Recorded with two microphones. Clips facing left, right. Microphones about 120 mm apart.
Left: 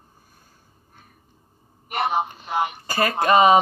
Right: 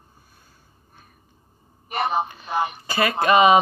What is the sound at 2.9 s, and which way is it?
Speech, 40° left (ahead or behind).